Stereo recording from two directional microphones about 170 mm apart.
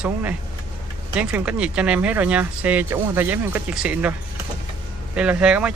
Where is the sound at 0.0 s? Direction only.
10° right (ahead or behind).